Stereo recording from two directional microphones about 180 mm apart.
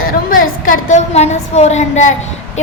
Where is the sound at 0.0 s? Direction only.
50° left (ahead or behind).